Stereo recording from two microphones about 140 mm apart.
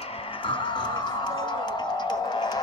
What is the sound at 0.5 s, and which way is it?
Music, 35° left (ahead or behind).